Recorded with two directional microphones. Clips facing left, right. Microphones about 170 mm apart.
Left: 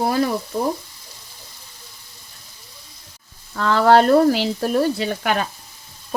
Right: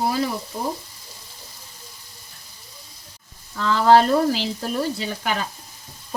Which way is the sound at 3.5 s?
60° left (ahead or behind).